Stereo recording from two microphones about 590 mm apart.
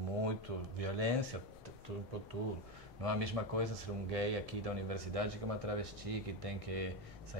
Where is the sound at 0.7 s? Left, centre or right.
Right.